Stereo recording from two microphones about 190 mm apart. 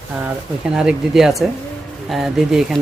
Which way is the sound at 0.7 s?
5° right (ahead or behind).